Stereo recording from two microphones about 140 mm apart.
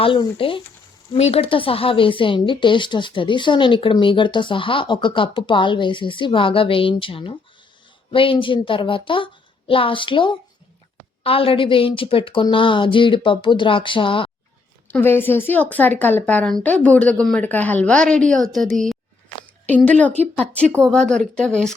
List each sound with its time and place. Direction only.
0.0 s speech: 40° left (ahead or behind)
14.8 s a woman's voice: 15° left (ahead or behind)